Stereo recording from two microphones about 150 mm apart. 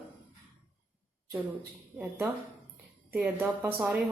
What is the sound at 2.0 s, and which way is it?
Speech, 10° right (ahead or behind).